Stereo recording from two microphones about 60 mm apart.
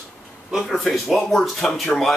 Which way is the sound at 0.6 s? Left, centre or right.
Centre.